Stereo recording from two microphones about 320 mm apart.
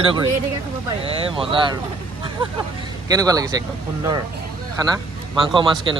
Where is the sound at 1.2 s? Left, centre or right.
Centre.